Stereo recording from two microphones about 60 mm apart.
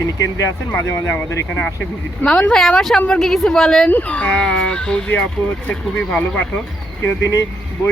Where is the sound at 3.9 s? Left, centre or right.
Left.